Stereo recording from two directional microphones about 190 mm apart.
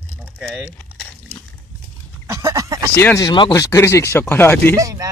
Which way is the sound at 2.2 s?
15° right (ahead or behind).